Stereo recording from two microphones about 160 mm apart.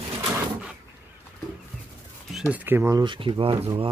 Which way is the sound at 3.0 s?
30° right (ahead or behind).